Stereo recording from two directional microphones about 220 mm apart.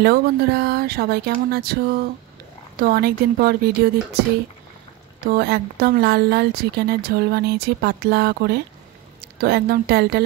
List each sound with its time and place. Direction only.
0.0 s speech: 45° right (ahead or behind)
2.8 s speech: 45° right (ahead or behind)
5.3 s a woman's voice: 45° right (ahead or behind)